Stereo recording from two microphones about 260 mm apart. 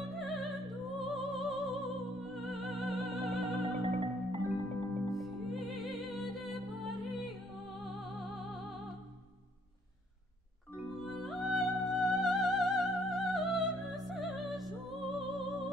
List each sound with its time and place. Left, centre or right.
0.2 s music: centre
3.6 s music: right
5.1 s music: centre
11.0 s music: centre